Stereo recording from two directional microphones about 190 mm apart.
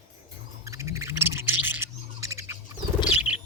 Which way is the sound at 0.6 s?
15° right (ahead or behind).